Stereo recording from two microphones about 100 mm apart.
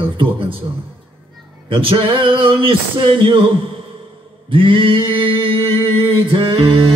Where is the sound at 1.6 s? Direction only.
60° right (ahead or behind).